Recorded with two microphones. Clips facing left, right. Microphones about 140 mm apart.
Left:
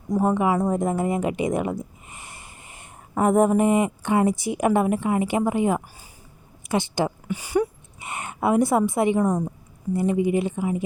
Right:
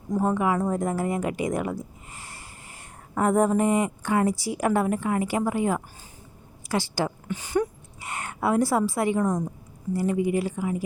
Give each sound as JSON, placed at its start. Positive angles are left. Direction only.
{"t": 0.1, "sound": "a woman's voice", "side_deg": 15}